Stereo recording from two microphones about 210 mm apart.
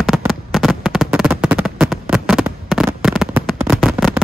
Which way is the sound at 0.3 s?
Centre (ahead or behind).